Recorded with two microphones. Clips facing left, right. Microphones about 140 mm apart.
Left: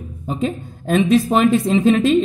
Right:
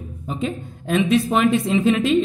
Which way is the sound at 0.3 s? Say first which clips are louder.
Left 4 dB; 40° left (ahead or behind).